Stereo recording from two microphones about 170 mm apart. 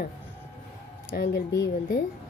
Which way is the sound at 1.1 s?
65° left (ahead or behind).